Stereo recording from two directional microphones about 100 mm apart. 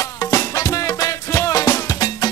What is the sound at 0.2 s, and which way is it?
Music, 35° left (ahead or behind).